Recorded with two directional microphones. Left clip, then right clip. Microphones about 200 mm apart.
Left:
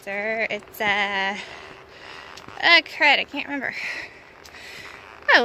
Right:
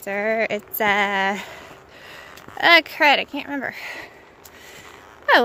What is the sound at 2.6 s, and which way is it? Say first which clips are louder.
Speech: right 2 dB; 35° right (ahead or behind).